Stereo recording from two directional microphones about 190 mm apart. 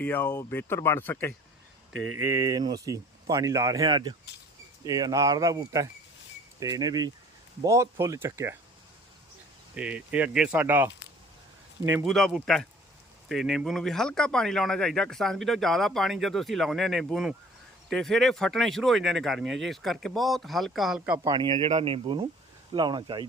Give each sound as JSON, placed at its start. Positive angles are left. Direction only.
{"t": 0.0, "sound": "speech", "side_deg": 10}
{"t": 2.1, "sound": "speech", "side_deg": -15}
{"t": 9.7, "sound": "speech", "side_deg": -5}
{"t": 12.0, "sound": "speech", "side_deg": 0}
{"t": 21.2, "sound": "speech", "side_deg": -25}